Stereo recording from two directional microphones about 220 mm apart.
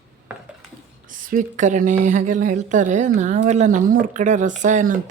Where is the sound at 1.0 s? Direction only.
35° right (ahead or behind).